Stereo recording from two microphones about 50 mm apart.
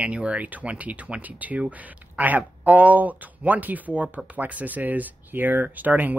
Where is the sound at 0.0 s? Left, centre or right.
Right.